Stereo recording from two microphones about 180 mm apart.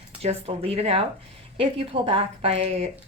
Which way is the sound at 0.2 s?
35° right (ahead or behind).